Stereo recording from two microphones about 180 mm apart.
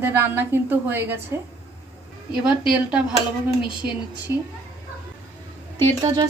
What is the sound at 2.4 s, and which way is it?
Speech, 5° right (ahead or behind).